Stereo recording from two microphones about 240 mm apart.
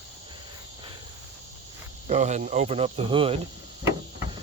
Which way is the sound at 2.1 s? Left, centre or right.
Right.